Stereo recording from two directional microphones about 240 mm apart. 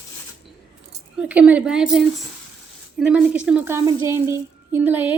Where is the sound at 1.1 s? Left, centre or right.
Centre.